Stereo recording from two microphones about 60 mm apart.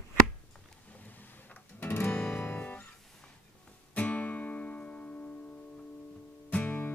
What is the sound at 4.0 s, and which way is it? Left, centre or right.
Music, left.